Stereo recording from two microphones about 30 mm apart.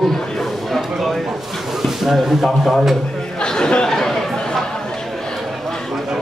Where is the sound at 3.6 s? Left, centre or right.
Left.